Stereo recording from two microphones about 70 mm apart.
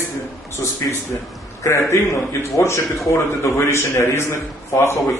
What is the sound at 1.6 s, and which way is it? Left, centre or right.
A man's voice, left.